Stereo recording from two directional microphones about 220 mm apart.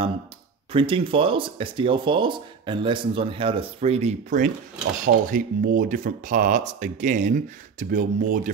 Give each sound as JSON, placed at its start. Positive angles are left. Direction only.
{"t": 0.7, "sound": "speech", "side_deg": -25}